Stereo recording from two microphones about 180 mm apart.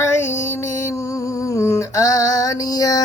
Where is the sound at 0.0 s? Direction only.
15° left (ahead or behind).